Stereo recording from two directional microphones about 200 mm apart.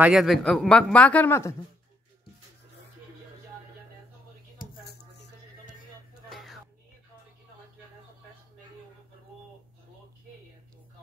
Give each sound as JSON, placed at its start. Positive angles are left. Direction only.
{"t": 0.0, "sound": "speech", "side_deg": 0}
{"t": 4.6, "sound": "a sound", "side_deg": 45}
{"t": 6.2, "sound": "music", "side_deg": 0}